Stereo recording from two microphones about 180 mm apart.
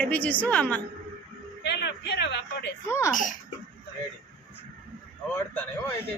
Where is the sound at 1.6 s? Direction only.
70° left (ahead or behind).